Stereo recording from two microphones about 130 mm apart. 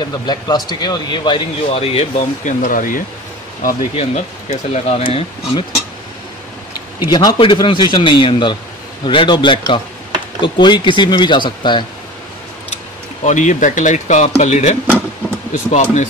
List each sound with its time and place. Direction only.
0.0 s speech: 35° left (ahead or behind); by 2.2 s 50° left (ahead or behind)
2.4 s speech: 85° left
3.9 s speech: 55° left (ahead or behind)
7.1 s speech: 35° left (ahead or behind)
13.2 s speech: 70° left (ahead or behind)